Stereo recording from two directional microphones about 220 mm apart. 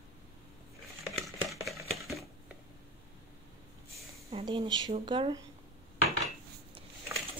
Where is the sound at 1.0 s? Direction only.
Centre (ahead or behind).